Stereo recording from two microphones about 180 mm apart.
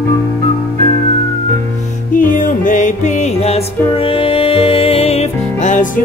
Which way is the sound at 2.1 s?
45° left (ahead or behind).